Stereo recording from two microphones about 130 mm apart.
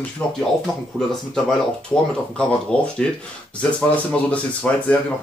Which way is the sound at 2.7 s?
5° left (ahead or behind).